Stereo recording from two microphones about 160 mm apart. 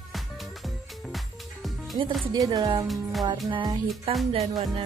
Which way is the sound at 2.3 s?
25° right (ahead or behind).